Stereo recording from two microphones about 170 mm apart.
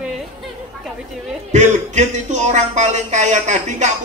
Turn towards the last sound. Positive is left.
turn(degrees=-45)  # may be behind; listen again after turning